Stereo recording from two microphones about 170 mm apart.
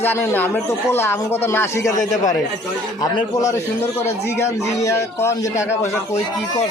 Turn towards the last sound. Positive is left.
turn(degrees=15)  # may be behind; listen again after turning